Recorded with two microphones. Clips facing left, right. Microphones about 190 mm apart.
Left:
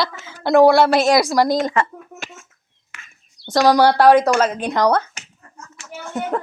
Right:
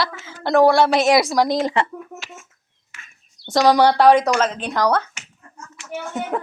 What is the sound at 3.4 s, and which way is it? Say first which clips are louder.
Speech: left 1 dB; centre (ahead or behind).